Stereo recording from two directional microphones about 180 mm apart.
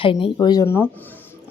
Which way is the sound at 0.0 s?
30° left (ahead or behind).